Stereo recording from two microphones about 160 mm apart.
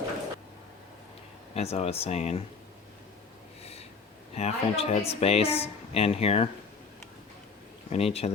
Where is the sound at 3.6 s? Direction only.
40° left (ahead or behind).